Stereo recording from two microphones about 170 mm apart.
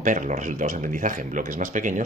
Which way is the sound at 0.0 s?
50° right (ahead or behind).